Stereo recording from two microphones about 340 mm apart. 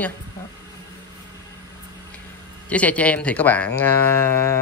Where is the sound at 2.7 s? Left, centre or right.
Centre.